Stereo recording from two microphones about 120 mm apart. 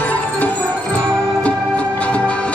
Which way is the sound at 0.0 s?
15° left (ahead or behind).